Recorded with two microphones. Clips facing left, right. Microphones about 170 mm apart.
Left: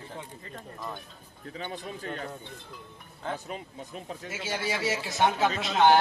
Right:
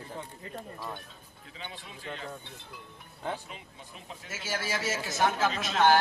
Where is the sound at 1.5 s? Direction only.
45° left (ahead or behind).